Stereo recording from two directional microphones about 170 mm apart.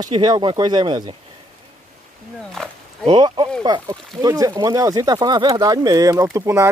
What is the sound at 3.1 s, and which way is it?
Speech, 25° right (ahead or behind).